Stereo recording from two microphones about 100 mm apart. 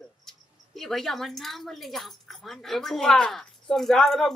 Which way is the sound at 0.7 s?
5° left (ahead or behind).